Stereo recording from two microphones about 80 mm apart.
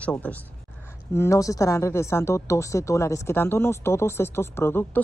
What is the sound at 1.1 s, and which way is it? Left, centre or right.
Speech, left.